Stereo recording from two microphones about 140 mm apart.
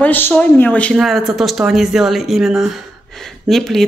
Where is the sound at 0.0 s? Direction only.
10° left (ahead or behind).